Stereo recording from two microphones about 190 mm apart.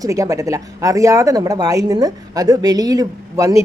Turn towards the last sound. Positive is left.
turn(degrees=-20)  # may be behind; listen again after turning